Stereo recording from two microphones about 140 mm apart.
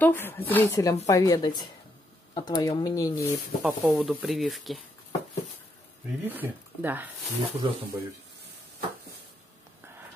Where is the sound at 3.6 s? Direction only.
10° right (ahead or behind).